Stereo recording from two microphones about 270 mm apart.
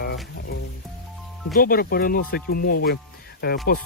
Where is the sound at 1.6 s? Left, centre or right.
Left.